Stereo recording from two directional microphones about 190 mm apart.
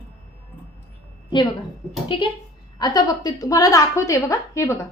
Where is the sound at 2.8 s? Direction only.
20° left (ahead or behind).